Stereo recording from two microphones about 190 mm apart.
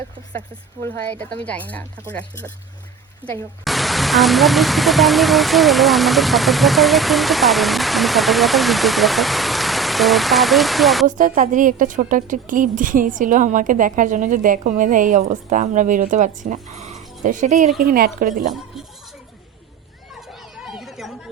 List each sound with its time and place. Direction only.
0.8 s speech: 10° left (ahead or behind)
3.2 s speech: 10° right (ahead or behind)
3.6 s speech: centre (ahead or behind)
11.0 s a woman's voice: 40° right (ahead or behind)
17.7 s a woman's voice: 50° right (ahead or behind)
20.7 s chatter: centre (ahead or behind)